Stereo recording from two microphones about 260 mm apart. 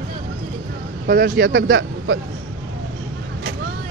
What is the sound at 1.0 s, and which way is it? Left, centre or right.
Speech, right.